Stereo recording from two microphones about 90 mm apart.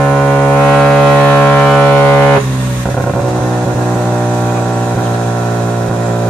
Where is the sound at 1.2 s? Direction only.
15° left (ahead or behind).